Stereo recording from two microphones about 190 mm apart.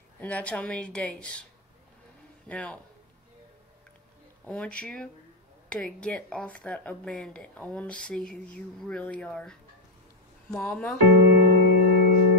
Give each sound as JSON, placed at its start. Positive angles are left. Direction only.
{"t": 0.2, "sound": "a woman's voice", "side_deg": 5}
{"t": 2.4, "sound": "a woman's voice", "side_deg": 5}
{"t": 4.5, "sound": "a woman's voice", "side_deg": 5}
{"t": 11.1, "sound": "music", "side_deg": -60}